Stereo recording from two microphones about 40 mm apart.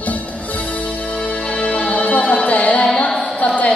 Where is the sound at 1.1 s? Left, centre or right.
Left.